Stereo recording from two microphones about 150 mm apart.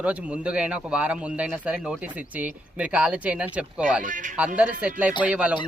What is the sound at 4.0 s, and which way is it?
Speech, 60° right (ahead or behind).